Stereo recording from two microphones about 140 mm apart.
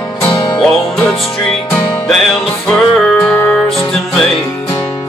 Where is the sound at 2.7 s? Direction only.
5° left (ahead or behind).